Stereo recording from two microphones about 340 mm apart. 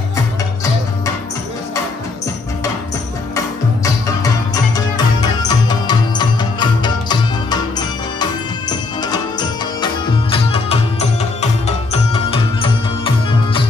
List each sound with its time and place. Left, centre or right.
3.3 s music: centre